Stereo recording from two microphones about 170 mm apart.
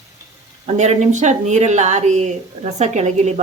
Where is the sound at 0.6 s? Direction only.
40° right (ahead or behind).